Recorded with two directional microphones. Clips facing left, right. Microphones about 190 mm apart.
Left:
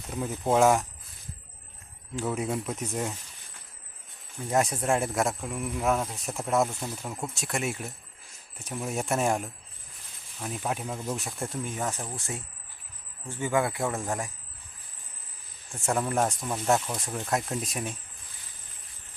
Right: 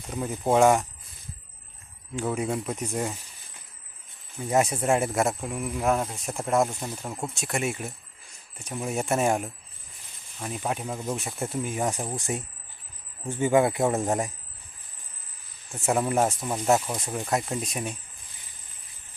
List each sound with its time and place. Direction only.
0.1 s speech: centre (ahead or behind)
2.1 s speech: centre (ahead or behind)
4.4 s speech: 5° right (ahead or behind)
6.7 s speech: 10° right (ahead or behind)
7.3 s speech: centre (ahead or behind); by 14.3 s 20° right (ahead or behind)
15.7 s speech: 5° right (ahead or behind)